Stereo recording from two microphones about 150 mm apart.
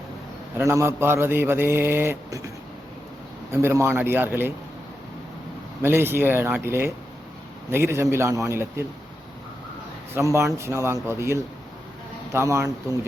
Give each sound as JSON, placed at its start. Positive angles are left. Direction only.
{"t": 0.5, "sound": "speech", "side_deg": -15}
{"t": 3.5, "sound": "speech", "side_deg": -15}
{"t": 5.8, "sound": "speech", "side_deg": -15}
{"t": 10.2, "sound": "speech", "side_deg": -20}